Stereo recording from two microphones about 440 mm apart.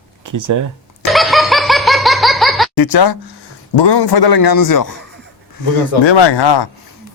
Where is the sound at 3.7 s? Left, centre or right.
Left.